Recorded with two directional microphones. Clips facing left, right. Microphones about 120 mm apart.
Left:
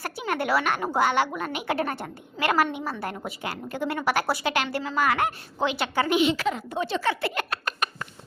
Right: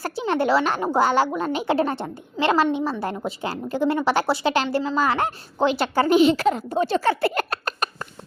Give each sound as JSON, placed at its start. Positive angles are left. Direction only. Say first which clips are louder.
{"t": 0.0, "sound": "a woman's voice", "louder": "right 6 dB", "side_deg": -30}